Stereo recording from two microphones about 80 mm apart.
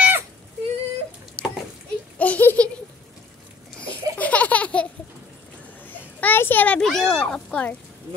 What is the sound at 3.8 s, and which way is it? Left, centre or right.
Laughter, centre.